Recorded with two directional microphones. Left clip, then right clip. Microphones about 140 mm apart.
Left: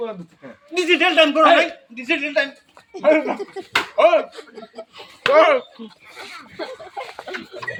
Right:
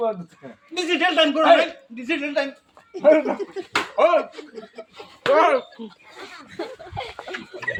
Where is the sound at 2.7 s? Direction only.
35° left (ahead or behind).